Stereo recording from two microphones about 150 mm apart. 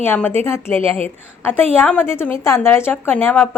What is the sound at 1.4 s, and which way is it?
A woman's voice, 15° left (ahead or behind).